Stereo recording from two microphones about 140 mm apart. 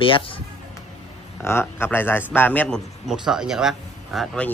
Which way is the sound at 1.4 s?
15° left (ahead or behind).